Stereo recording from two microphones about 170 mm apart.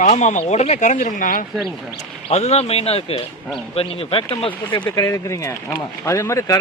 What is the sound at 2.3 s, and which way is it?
Speech, 40° left (ahead or behind).